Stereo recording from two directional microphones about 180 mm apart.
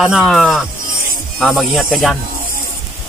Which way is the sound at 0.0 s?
Centre (ahead or behind).